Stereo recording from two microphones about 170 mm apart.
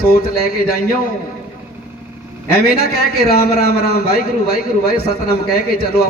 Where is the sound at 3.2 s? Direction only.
65° left (ahead or behind).